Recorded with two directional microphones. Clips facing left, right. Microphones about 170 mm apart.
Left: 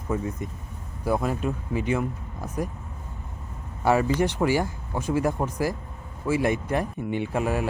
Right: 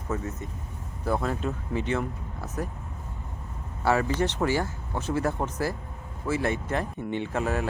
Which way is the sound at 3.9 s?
15° left (ahead or behind).